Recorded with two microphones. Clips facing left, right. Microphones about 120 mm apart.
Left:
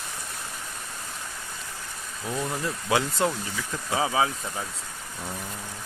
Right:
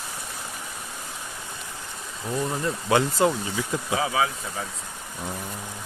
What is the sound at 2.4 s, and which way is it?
Speech, 5° right (ahead or behind).